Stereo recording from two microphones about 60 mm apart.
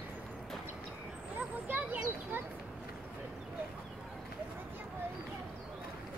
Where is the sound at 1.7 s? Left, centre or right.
Right.